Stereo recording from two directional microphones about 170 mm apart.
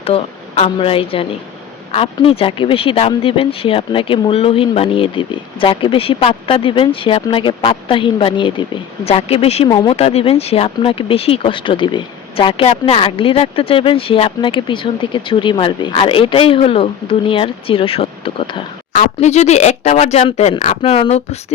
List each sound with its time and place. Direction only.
0.0 s speech: 35° left (ahead or behind)